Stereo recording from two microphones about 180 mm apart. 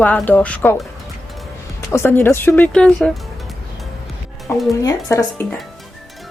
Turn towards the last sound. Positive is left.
turn(degrees=20)  # may be behind; listen again after turning